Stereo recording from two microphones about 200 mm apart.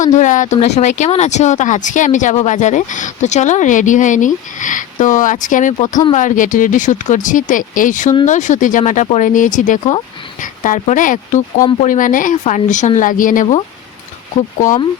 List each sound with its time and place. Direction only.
0.0 s speech: 40° left (ahead or behind)